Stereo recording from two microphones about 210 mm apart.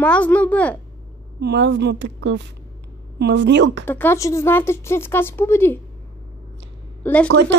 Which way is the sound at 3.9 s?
10° left (ahead or behind).